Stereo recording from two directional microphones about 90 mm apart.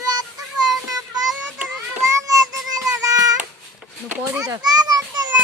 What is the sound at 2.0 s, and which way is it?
Child singing, 35° right (ahead or behind).